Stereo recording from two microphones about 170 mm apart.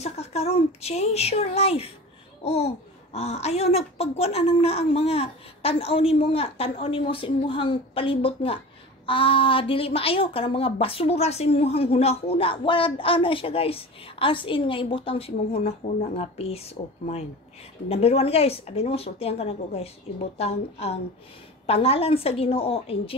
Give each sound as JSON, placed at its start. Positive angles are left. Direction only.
{"t": 0.0, "sound": "a woman's voice", "side_deg": 40}